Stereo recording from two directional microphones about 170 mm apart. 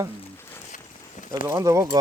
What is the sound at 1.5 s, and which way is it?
Speech, 15° right (ahead or behind).